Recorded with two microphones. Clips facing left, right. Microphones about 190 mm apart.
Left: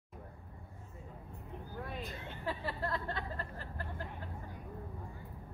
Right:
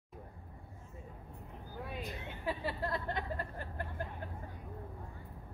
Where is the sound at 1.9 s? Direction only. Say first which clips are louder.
Even; 15° right (ahead or behind).